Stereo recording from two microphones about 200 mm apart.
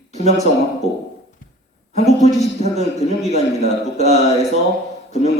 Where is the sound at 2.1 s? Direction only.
35° left (ahead or behind).